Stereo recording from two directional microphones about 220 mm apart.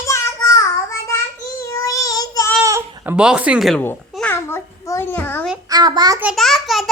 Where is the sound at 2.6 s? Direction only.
15° right (ahead or behind); by 5.5 s 10° left (ahead or behind).